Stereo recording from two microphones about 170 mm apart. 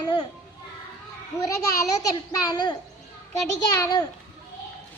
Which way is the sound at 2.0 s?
25° left (ahead or behind).